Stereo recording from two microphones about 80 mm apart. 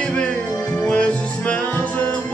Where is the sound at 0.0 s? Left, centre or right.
Centre.